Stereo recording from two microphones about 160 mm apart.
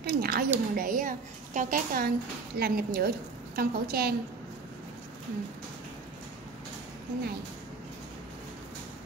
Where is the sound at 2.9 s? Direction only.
75° right (ahead or behind).